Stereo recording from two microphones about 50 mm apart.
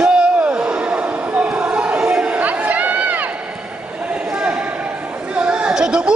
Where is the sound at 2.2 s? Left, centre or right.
Right.